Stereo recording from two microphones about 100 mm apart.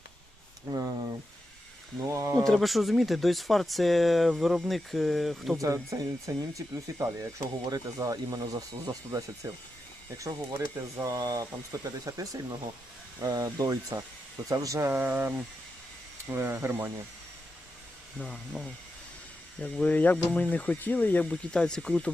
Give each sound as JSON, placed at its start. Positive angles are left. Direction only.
{"t": 2.0, "sound": "speech", "side_deg": -30}
{"t": 2.4, "sound": "speech", "side_deg": 5}
{"t": 5.5, "sound": "speech", "side_deg": -30}
{"t": 18.2, "sound": "speech", "side_deg": 0}